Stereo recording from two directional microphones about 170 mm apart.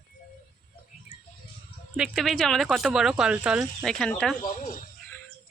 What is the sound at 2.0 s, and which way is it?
Speech, centre (ahead or behind).